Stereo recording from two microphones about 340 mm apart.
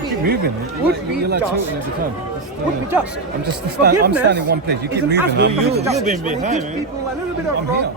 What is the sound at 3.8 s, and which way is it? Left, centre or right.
Speech, right.